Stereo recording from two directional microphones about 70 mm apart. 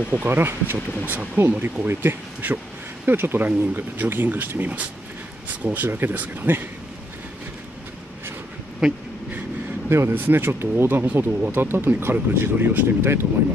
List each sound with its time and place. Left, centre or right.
0.1 s speech: right
9.8 s speech: right